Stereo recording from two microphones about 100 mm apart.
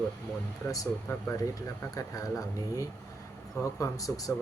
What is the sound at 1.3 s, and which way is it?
Speech, 35° left (ahead or behind).